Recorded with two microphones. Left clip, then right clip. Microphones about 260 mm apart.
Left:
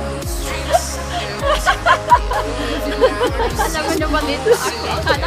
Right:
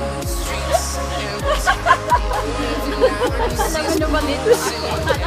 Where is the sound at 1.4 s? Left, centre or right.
Left.